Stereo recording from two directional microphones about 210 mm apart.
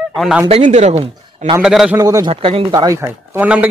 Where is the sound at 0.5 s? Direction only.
30° right (ahead or behind).